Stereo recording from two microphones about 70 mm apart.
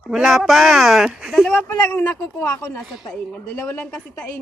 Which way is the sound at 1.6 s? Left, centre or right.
Left.